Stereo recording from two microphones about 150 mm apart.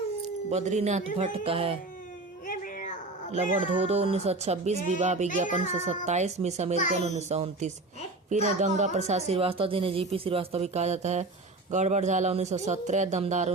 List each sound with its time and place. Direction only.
0.5 s a woman's voice: 50° right (ahead or behind)
2.5 s a sound: 60° left (ahead or behind)
3.4 s a woman's voice: 45° right (ahead or behind)